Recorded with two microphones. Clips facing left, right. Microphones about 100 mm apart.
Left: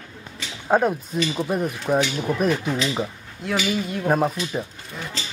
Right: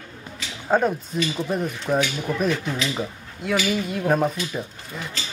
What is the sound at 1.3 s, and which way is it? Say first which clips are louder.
Speech: left 1 dB; 15° left (ahead or behind).